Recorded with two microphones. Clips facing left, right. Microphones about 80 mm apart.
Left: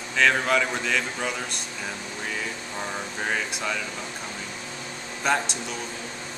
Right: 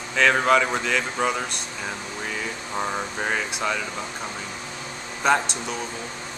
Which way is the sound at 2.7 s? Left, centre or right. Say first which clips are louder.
Right 6 dB; right.